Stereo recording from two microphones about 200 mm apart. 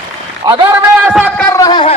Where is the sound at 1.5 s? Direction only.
20° left (ahead or behind).